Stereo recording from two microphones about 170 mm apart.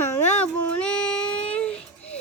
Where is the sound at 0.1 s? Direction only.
5° left (ahead or behind).